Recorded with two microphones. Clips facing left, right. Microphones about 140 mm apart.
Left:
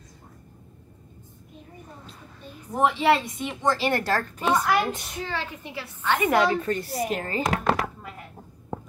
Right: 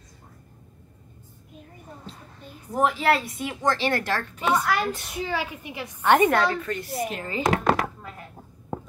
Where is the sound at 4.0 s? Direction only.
40° left (ahead or behind).